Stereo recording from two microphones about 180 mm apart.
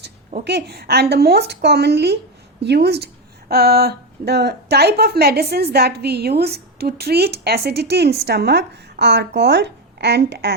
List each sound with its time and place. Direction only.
0.4 s a woman's voice: 65° right (ahead or behind)